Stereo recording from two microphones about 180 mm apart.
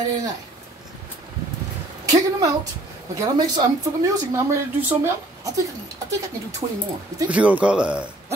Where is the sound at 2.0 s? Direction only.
20° right (ahead or behind).